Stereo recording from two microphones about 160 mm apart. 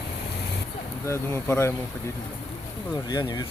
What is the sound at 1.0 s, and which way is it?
Speech, 15° left (ahead or behind).